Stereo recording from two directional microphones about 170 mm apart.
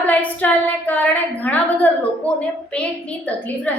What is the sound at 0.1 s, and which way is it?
A woman's voice, 10° left (ahead or behind).